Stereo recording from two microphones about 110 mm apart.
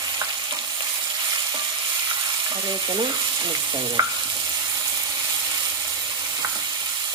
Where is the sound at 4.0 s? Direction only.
30° right (ahead or behind).